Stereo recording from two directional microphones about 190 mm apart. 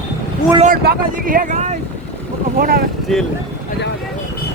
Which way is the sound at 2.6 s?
50° right (ahead or behind).